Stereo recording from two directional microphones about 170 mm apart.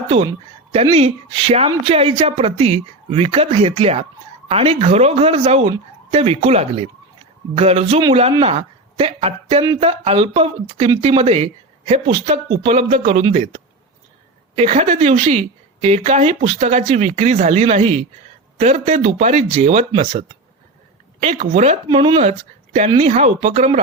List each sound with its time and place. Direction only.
0.7 s a woman's voice: 35° right (ahead or behind)
21.8 s speech: 30° right (ahead or behind)